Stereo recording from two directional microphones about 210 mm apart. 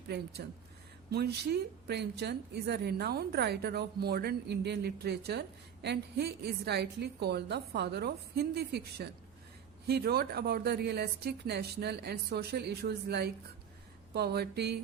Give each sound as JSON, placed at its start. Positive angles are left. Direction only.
{"t": 0.4, "sound": "a woman's voice", "side_deg": -50}